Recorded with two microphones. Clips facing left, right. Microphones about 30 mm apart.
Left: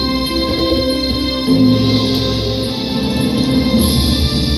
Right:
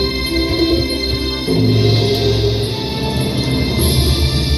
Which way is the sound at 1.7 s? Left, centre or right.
Left.